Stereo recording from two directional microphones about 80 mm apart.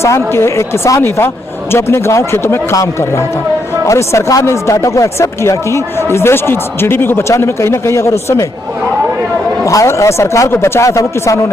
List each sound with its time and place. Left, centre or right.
0.0 s speech: left
9.6 s speech: left